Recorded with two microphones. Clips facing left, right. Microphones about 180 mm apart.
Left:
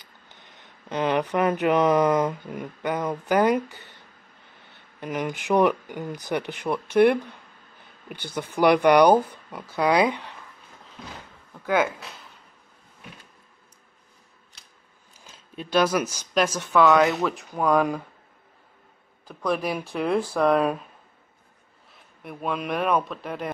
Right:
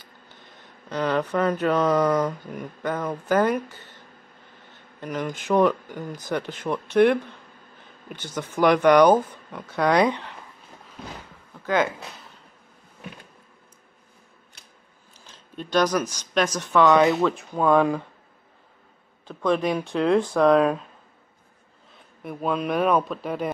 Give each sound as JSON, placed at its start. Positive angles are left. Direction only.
{"t": 0.8, "sound": "speech", "side_deg": 20}
{"t": 5.0, "sound": "speech", "side_deg": 15}
{"t": 10.0, "sound": "speech", "side_deg": 15}
{"t": 11.6, "sound": "speech", "side_deg": 10}
{"t": 15.3, "sound": "speech", "side_deg": 5}
{"t": 19.2, "sound": "speech", "side_deg": 5}
{"t": 21.9, "sound": "a man's voice", "side_deg": 0}